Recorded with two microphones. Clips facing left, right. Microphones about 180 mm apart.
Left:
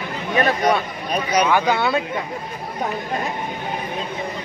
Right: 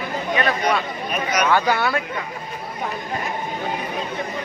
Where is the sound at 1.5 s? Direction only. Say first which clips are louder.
Left 1 dB; 20° left (ahead or behind).